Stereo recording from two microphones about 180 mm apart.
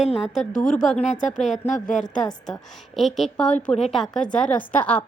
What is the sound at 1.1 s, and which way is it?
Speech, 45° left (ahead or behind).